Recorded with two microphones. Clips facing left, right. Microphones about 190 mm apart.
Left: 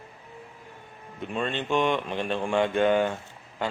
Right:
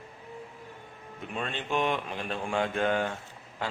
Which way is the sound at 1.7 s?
5° right (ahead or behind).